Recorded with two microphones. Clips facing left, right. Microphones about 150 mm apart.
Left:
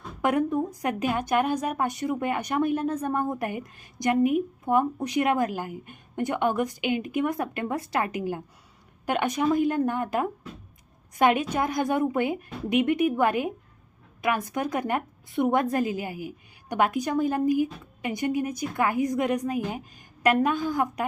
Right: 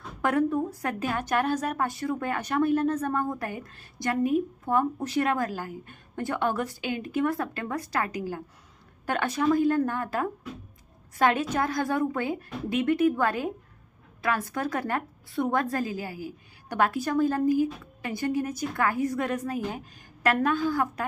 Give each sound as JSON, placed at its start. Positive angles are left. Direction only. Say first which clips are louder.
{"t": 0.2, "sound": "a woman's voice", "louder": "left 1 dB", "side_deg": 15}